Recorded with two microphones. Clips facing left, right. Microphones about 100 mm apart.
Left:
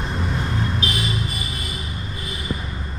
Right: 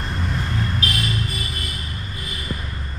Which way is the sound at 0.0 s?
Centre (ahead or behind).